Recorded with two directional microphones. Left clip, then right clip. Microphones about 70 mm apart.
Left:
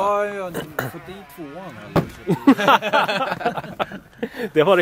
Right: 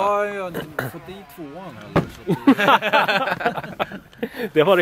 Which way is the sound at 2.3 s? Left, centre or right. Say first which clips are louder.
Left 1 dB; centre.